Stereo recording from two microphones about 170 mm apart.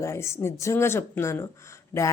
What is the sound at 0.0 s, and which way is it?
Speech, 15° left (ahead or behind).